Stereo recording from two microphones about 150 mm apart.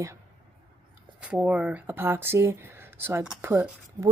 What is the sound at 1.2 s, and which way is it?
Speech, 10° right (ahead or behind).